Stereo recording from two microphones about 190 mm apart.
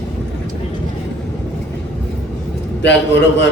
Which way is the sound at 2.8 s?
65° left (ahead or behind).